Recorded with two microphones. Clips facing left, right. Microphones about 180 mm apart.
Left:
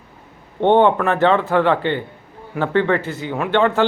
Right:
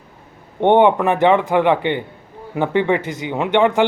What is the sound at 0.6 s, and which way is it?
Speech, 15° right (ahead or behind).